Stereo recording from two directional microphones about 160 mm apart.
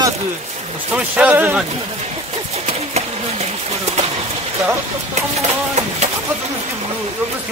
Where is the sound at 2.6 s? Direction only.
40° right (ahead or behind).